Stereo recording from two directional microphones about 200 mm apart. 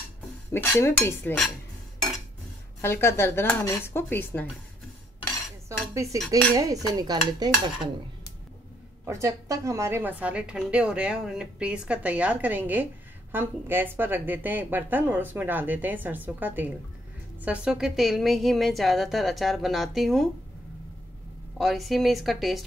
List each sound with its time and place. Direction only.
0.5 s speech: 15° left (ahead or behind)
2.8 s speech: 10° left (ahead or behind)
6.5 s stir: 15° right (ahead or behind)
9.0 s a woman's voice: 15° right (ahead or behind)
21.5 s a woman's voice: centre (ahead or behind)